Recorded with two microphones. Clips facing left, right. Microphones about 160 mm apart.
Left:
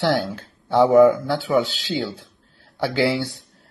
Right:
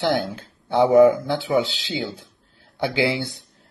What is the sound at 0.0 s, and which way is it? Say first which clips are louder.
Speech: left 1 dB; 20° right (ahead or behind).